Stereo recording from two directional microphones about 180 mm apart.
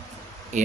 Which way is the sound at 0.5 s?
40° right (ahead or behind).